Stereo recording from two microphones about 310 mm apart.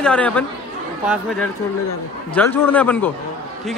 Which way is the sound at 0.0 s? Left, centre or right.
Centre.